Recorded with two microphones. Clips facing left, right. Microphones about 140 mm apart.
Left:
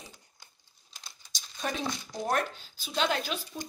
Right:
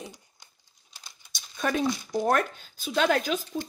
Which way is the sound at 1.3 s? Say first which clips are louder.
Right 6 dB; 60° right (ahead or behind).